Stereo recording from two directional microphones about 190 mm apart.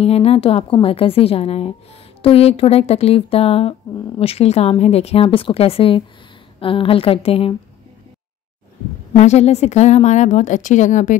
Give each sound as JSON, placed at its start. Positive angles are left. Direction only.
{"t": 0.0, "sound": "a woman's voice", "side_deg": 30}
{"t": 9.1, "sound": "a woman's voice", "side_deg": 35}